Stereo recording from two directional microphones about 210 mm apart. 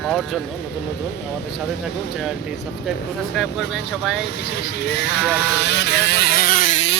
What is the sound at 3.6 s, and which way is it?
Speech, 55° left (ahead or behind).